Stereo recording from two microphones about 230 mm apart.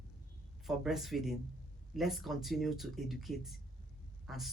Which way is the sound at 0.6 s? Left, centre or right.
Centre.